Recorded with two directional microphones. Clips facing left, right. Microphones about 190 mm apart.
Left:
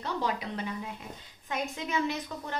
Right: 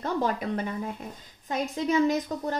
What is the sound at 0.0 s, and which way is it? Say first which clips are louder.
A woman's voice: right 5 dB; 50° right (ahead or behind).